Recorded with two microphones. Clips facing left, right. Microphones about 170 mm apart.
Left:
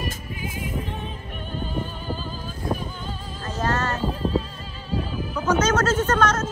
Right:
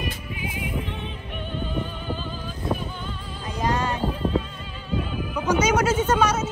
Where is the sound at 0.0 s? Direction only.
40° left (ahead or behind).